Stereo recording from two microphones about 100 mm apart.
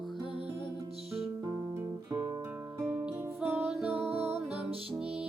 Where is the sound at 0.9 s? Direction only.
85° right.